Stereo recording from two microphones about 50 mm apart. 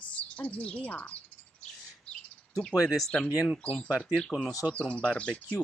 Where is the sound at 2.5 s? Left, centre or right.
Centre.